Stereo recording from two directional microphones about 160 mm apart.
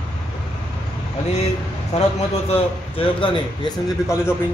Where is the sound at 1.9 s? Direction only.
45° left (ahead or behind).